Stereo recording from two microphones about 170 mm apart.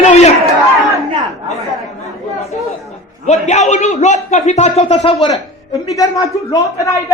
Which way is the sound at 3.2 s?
40° left (ahead or behind).